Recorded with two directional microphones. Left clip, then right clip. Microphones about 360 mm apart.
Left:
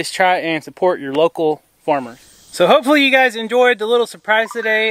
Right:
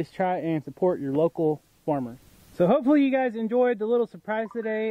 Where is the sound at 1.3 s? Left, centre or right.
Left.